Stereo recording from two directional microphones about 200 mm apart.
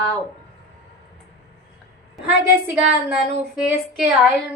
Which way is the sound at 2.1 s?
5° right (ahead or behind).